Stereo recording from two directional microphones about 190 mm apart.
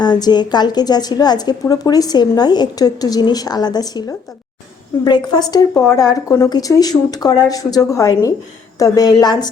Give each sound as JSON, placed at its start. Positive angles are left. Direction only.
{"t": 0.0, "sound": "a woman's voice", "side_deg": 20}